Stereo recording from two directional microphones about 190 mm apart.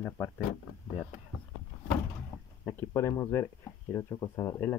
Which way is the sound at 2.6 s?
15° left (ahead or behind).